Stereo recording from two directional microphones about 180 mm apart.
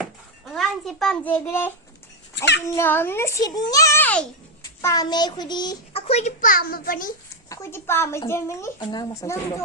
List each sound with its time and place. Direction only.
0.0 s a sound: centre (ahead or behind)
2.3 s a child's voice: 70° left (ahead or behind)
2.7 s a child's voice: 10° left (ahead or behind)
4.8 s a child's voice: 20° left (ahead or behind); by 7.1 s 50° left (ahead or behind)
7.5 s a child's voice: 15° left (ahead or behind)
8.8 s speech: 25° left (ahead or behind)